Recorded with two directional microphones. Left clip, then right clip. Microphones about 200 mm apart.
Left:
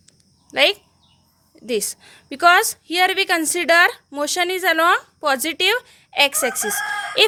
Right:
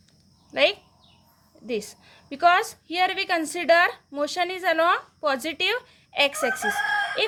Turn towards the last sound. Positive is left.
turn(degrees=45)  # may be behind; listen again after turning